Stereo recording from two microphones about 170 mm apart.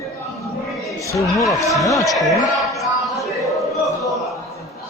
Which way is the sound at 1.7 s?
Centre (ahead or behind).